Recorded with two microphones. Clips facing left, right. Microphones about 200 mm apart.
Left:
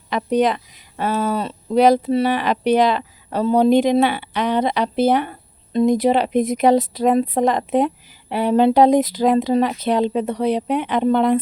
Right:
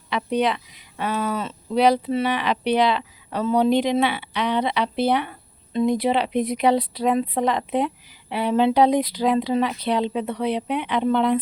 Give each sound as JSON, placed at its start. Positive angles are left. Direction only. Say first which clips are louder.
{"t": 0.1, "sound": "speech", "louder": "left 4 dB", "side_deg": 45}